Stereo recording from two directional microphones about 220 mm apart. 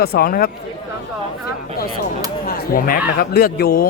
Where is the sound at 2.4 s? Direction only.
40° left (ahead or behind).